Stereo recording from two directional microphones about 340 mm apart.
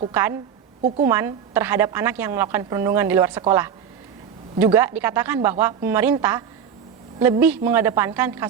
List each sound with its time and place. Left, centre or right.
0.0 s a woman's voice: centre
0.8 s a woman's voice: right
1.0 s a woman's voice: centre